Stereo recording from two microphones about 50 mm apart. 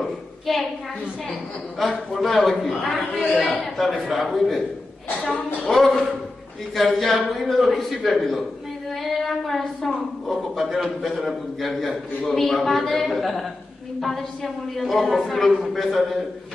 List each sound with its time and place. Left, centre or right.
1.8 s a woman's voice: centre